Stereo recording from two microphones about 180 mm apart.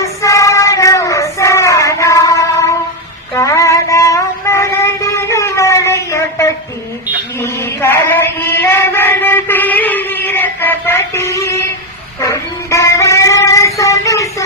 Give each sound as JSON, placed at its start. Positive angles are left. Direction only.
{"t": 0.0, "sound": "child singing", "side_deg": 15}
{"t": 3.3, "sound": "music", "side_deg": 15}
{"t": 7.3, "sound": "chant", "side_deg": 15}
{"t": 12.2, "sound": "a sound", "side_deg": 15}